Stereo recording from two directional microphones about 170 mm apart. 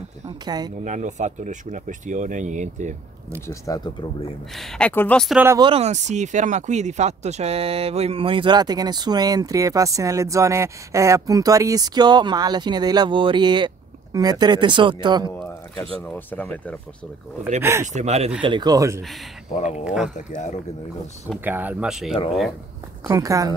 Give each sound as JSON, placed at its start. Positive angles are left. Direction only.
{"t": 0.5, "sound": "speech", "side_deg": -25}
{"t": 0.8, "sound": "speech", "side_deg": -45}
{"t": 3.4, "sound": "speech", "side_deg": 20}
{"t": 4.6, "sound": "speech", "side_deg": 5}
{"t": 5.6, "sound": "speech", "side_deg": -35}
{"t": 15.8, "sound": "speech", "side_deg": 10}
{"t": 17.6, "sound": "speech", "side_deg": -15}
{"t": 17.9, "sound": "speech", "side_deg": -40}
{"t": 18.4, "sound": "speech", "side_deg": -25}
{"t": 19.5, "sound": "speech", "side_deg": 45}
{"t": 19.8, "sound": "speech", "side_deg": -5}
{"t": 20.2, "sound": "speech", "side_deg": 45}
{"t": 21.5, "sound": "speech", "side_deg": -10}
{"t": 23.0, "sound": "speech", "side_deg": -20}